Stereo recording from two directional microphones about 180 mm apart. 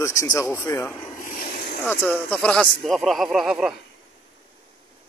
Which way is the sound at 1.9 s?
10° left (ahead or behind).